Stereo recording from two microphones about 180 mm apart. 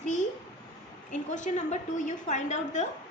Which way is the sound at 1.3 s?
45° left (ahead or behind).